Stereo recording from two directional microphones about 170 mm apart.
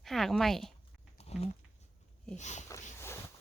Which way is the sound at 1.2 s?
40° left (ahead or behind).